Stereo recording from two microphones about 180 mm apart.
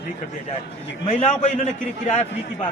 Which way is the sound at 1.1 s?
35° left (ahead or behind).